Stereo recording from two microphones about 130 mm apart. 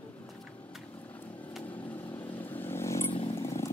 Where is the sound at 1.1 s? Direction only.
15° left (ahead or behind).